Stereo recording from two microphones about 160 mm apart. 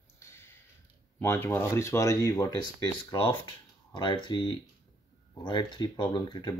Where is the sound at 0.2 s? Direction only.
15° left (ahead or behind).